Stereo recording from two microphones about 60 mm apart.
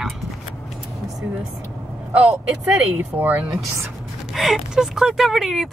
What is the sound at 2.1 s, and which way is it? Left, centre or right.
Speech, right.